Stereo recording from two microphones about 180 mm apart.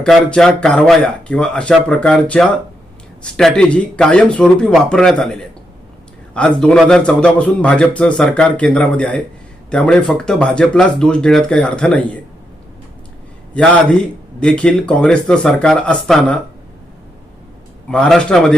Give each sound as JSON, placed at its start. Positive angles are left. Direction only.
{"t": 0.0, "sound": "a man's voice", "side_deg": 5}
{"t": 14.3, "sound": "a man's voice", "side_deg": 5}
{"t": 17.9, "sound": "a man's voice", "side_deg": 5}